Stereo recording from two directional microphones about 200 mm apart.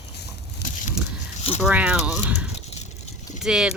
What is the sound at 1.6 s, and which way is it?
Speech, 5° right (ahead or behind).